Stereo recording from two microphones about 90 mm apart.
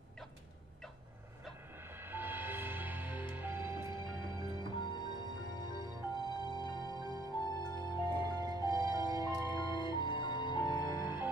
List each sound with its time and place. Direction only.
2.0 s music: 25° right (ahead or behind)
3.9 s music: 55° left (ahead or behind)
8.5 s music: 45° right (ahead or behind)
9.8 s music: 60° left (ahead or behind)